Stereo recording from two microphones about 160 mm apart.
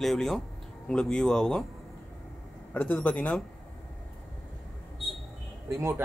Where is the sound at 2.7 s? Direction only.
10° left (ahead or behind).